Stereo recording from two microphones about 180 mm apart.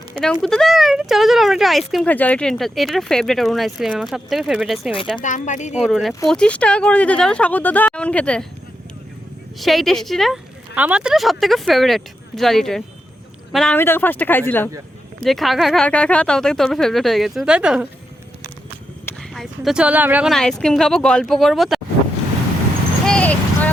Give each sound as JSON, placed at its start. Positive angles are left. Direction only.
{"t": 0.4, "sound": "a woman's voice", "side_deg": 0}
{"t": 5.2, "sound": "speech", "side_deg": 45}
{"t": 5.7, "sound": "a woman's voice", "side_deg": 0}
{"t": 9.6, "sound": "a woman's voice", "side_deg": 0}
{"t": 15.2, "sound": "a woman's voice", "side_deg": 0}
{"t": 19.3, "sound": "a woman's voice", "side_deg": 0}
{"t": 23.0, "sound": "a sound", "side_deg": 5}